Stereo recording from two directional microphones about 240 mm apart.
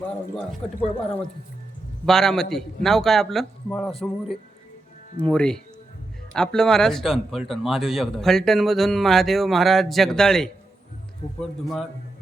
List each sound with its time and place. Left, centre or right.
0.0 s speech: centre
0.8 s speech: left
2.0 s speech: centre
5.2 s speech: centre